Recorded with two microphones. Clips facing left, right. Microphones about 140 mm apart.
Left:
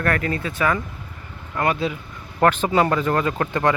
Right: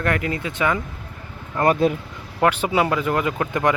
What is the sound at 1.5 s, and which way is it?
Speech, 40° right (ahead or behind).